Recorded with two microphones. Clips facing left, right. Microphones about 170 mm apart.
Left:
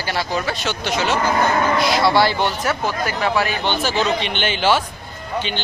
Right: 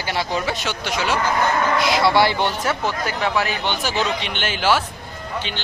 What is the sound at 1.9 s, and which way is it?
Speech, 20° right (ahead or behind).